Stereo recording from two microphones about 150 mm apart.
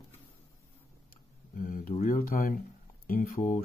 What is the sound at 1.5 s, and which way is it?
Speech, 65° left (ahead or behind).